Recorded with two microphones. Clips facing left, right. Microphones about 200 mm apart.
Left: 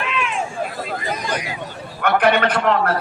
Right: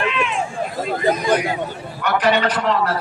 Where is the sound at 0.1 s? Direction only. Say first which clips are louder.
Right 2 dB; centre (ahead or behind).